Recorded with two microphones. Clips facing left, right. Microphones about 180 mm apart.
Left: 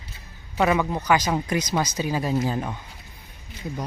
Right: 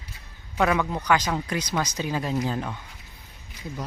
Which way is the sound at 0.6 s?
10° left (ahead or behind).